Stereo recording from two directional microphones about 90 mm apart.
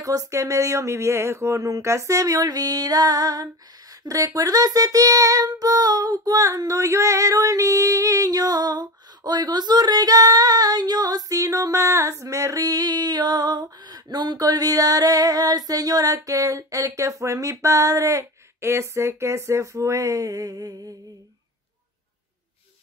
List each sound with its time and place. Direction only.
0.0 s speech: 40° right (ahead or behind)
4.1 s child singing: 40° right (ahead or behind)